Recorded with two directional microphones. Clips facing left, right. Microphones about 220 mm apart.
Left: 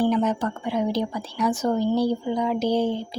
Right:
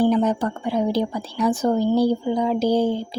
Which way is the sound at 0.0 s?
35° right (ahead or behind).